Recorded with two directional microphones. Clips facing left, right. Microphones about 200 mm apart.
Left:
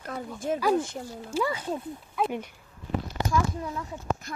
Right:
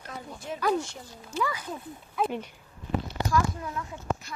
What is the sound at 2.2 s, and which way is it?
Speech, centre (ahead or behind).